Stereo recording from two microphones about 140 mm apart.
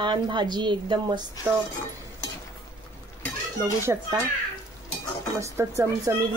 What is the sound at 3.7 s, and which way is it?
Speech, 20° right (ahead or behind).